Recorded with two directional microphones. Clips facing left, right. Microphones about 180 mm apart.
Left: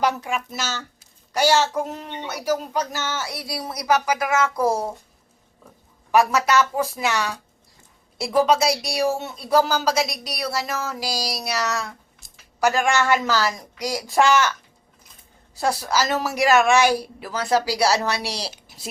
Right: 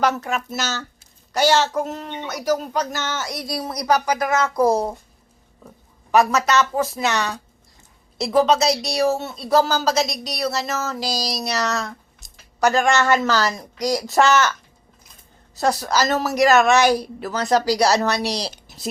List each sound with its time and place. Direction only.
0.3 s speech: 40° right (ahead or behind)
1.3 s speech: 10° left (ahead or behind)
6.1 s speech: 10° left (ahead or behind)
8.4 s speech: 10° left (ahead or behind)
15.5 s speech: 10° left (ahead or behind)